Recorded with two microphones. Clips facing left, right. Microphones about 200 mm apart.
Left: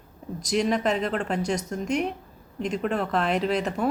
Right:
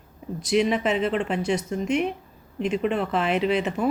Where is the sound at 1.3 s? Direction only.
40° left (ahead or behind).